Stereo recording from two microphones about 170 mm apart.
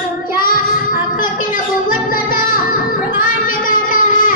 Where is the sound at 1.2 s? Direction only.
55° left (ahead or behind).